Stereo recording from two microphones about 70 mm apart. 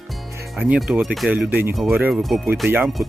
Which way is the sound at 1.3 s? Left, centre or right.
Right.